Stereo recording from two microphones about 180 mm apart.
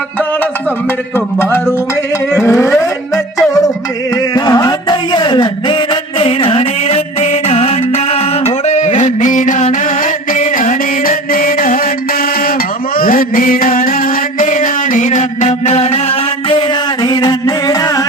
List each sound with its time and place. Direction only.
1.1 s music: 15° left (ahead or behind)
4.4 s a sound: 20° left (ahead or behind); by 11.8 s 50° left (ahead or behind)
13.0 s music: 50° left (ahead or behind)
16.5 s music: 25° left (ahead or behind)